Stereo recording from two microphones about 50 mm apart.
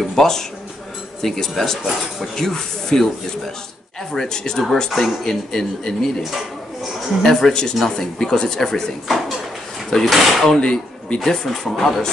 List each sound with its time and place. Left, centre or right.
0.1 s speech: centre
2.3 s speech: centre
4.1 s speech: centre
10.6 s speech: centre
11.1 s speech: centre